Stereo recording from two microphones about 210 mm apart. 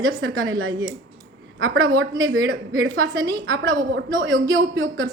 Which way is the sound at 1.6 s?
60° right (ahead or behind).